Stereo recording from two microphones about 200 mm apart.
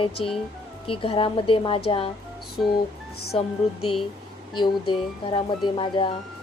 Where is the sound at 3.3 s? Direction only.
30° left (ahead or behind).